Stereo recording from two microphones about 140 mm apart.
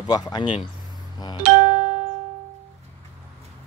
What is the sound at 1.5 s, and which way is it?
Music, 60° right (ahead or behind).